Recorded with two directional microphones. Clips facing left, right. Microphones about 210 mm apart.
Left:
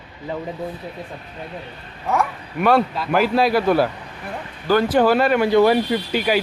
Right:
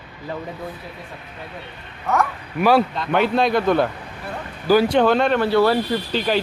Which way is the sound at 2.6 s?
Centre (ahead or behind).